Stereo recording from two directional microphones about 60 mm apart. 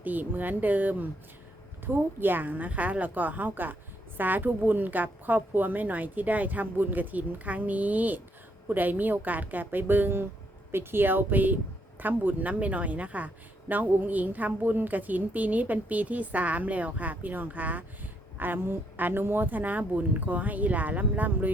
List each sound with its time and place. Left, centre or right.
0.0 s a woman's voice: right